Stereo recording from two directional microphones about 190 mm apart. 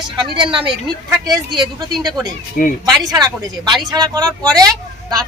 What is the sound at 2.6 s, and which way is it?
Speech, 50° left (ahead or behind).